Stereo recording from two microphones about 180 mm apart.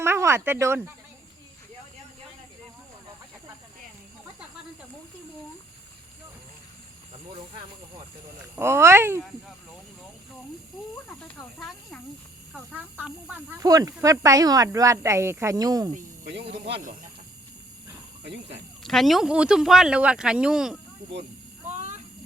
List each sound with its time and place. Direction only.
0.0 s speech: 15° right (ahead or behind)
8.5 s speech: 15° right (ahead or behind)
11.2 s speech: 5° left (ahead or behind)
13.1 s speech: 5° right (ahead or behind)
13.6 s speech: 20° right (ahead or behind)
18.8 s speech: centre (ahead or behind)